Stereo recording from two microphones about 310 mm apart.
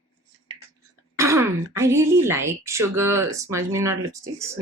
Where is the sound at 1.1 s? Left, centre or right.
Centre.